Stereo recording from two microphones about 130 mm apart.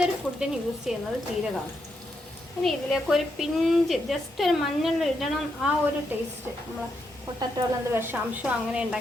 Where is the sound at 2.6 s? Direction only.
Centre (ahead or behind).